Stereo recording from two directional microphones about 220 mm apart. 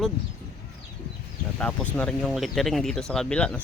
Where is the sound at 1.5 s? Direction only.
5° left (ahead or behind).